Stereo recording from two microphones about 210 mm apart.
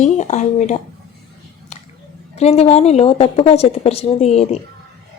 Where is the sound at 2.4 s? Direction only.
30° left (ahead or behind).